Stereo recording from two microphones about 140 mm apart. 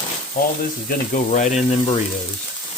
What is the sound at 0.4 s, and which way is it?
Frying, 90° left.